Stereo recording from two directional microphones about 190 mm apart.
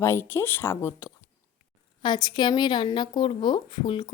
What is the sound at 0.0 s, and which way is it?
A woman's voice, 15° left (ahead or behind).